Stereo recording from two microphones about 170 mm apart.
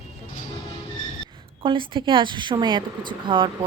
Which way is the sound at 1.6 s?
30° right (ahead or behind).